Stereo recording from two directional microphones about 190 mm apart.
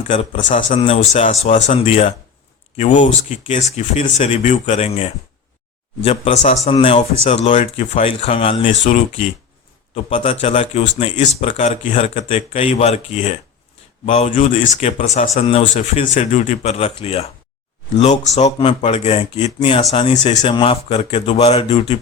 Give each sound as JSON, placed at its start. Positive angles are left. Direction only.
{"t": 0.1, "sound": "speech", "side_deg": 35}
{"t": 10.4, "sound": "speech", "side_deg": 35}